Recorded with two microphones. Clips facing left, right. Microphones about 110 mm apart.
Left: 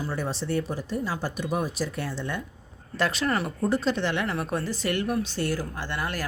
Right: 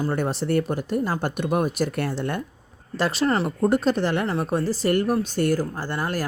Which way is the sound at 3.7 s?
50° right (ahead or behind).